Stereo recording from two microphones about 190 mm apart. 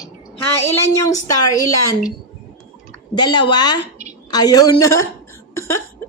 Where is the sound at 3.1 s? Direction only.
25° left (ahead or behind).